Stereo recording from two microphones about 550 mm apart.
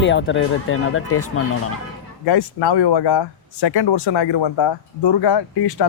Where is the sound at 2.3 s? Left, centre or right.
Left.